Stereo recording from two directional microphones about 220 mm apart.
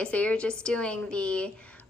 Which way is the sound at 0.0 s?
5° left (ahead or behind).